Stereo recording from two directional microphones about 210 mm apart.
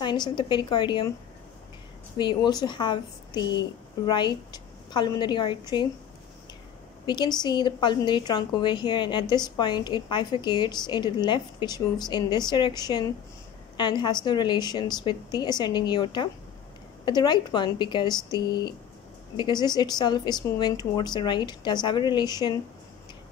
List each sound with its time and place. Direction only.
0.0 s a woman's voice: 20° left (ahead or behind)
2.1 s a woman's voice: 20° left (ahead or behind)
7.1 s a woman's voice: 20° left (ahead or behind)